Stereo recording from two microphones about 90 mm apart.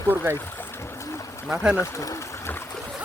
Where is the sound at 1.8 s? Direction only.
35° left (ahead or behind).